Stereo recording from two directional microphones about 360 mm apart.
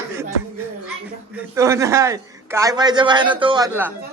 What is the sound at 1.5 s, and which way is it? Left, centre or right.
A man's voice, centre.